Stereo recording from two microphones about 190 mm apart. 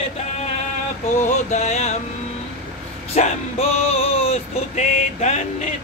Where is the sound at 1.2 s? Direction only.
40° left (ahead or behind).